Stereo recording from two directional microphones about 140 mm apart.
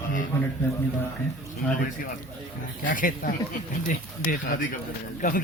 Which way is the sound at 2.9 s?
70° left (ahead or behind).